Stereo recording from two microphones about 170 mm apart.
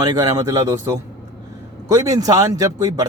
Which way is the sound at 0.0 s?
20° right (ahead or behind).